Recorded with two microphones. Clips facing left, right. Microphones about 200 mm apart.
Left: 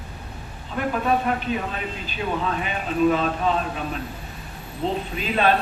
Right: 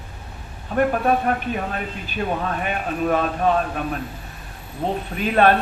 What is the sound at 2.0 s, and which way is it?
Speech, 50° right (ahead or behind).